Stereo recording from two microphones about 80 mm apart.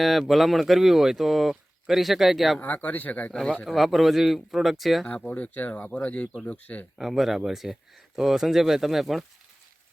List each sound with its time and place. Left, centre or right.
0.0 s speech: centre
2.6 s speech: left
3.8 s speech: centre
5.0 s speech: centre
7.0 s speech: centre